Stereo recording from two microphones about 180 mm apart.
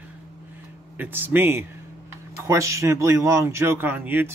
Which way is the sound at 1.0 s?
10° right (ahead or behind).